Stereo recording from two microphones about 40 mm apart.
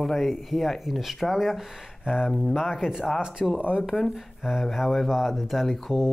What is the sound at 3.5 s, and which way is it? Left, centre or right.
Speech, right.